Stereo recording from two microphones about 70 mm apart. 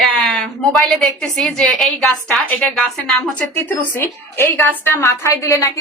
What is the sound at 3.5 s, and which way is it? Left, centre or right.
A woman's voice, left.